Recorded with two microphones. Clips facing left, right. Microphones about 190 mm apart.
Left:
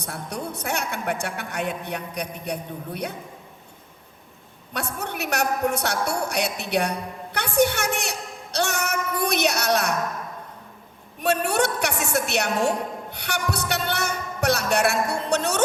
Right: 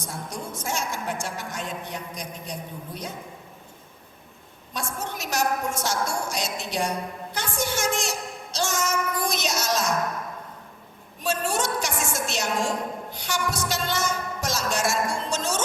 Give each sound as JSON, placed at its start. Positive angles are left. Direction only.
{"t": 0.0, "sound": "a woman's voice", "side_deg": 65}
{"t": 4.7, "sound": "a woman's voice", "side_deg": 65}
{"t": 11.2, "sound": "a woman's voice", "side_deg": 65}